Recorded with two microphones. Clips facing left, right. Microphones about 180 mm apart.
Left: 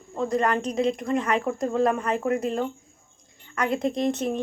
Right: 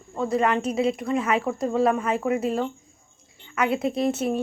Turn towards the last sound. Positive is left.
turn(degrees=-5)  # may be behind; listen again after turning